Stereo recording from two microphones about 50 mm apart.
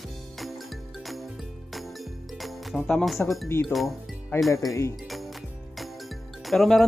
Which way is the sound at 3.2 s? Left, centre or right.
Left.